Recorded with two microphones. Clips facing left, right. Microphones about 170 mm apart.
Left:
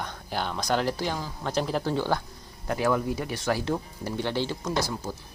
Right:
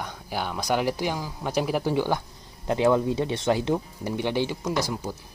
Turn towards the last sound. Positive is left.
turn(degrees=-15)  # may be behind; listen again after turning